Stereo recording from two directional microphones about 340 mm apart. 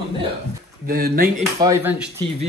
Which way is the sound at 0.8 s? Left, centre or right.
Right.